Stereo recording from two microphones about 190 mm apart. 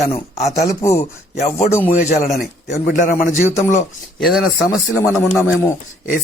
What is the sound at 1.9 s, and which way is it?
A man's voice, 40° left (ahead or behind).